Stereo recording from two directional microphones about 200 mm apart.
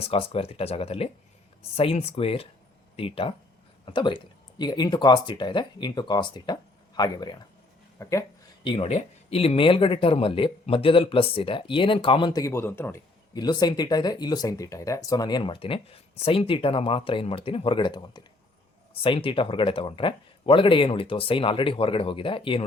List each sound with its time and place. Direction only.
0.0 s speech: 30° left (ahead or behind)
8.6 s speech: 25° left (ahead or behind)